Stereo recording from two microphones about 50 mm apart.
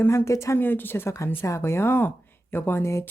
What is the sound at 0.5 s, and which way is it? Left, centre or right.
Speech, left.